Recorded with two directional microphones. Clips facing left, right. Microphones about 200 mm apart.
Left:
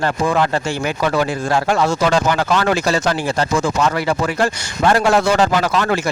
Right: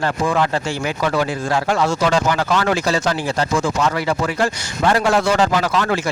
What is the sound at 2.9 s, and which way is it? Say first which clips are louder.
Speech: left 1 dB; 70° left (ahead or behind).